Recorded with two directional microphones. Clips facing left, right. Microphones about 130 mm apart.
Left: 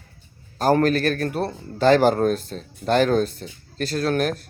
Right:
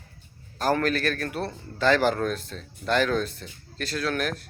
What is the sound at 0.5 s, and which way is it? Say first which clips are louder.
Speech: left 6 dB; 40° left (ahead or behind).